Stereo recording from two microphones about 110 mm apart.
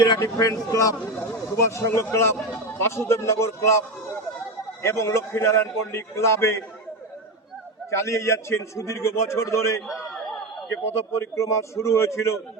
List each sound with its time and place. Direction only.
0.2 s a man's voice: 30° left (ahead or behind)
7.9 s a man's voice: 25° left (ahead or behind)